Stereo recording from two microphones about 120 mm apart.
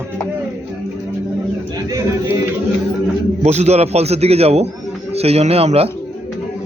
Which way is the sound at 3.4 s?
65° right (ahead or behind).